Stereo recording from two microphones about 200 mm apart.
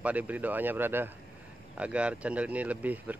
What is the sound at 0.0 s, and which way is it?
Speech, 5° right (ahead or behind).